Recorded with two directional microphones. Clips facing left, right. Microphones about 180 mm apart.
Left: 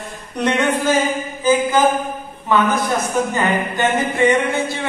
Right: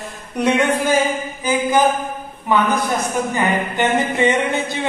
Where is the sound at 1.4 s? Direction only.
15° right (ahead or behind).